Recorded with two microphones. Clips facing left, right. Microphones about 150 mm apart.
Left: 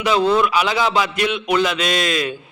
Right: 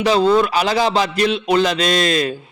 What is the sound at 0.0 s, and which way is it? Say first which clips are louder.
Speech: right 2 dB; 35° right (ahead or behind).